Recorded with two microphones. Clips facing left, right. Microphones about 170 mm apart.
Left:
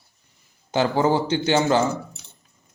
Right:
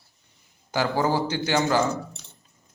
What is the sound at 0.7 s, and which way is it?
Speech, 25° left (ahead or behind).